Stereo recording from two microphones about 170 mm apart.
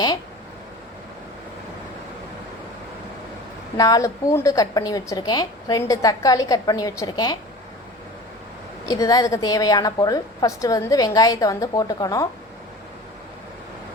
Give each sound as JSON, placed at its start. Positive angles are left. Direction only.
{"t": 3.8, "sound": "a woman's voice", "side_deg": 20}
{"t": 8.9, "sound": "a woman's voice", "side_deg": 20}